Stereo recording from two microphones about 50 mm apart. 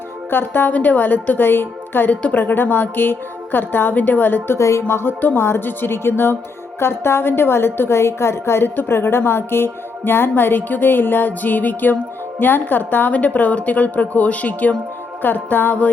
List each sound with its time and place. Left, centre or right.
0.3 s a woman's voice: left
4.5 s speech: left
4.8 s a woman's voice: left